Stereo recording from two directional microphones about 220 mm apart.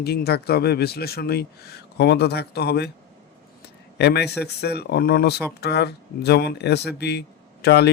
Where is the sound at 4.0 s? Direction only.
50° left (ahead or behind).